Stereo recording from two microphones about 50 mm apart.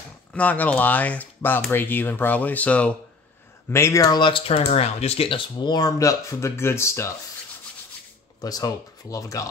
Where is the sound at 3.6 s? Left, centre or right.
Left.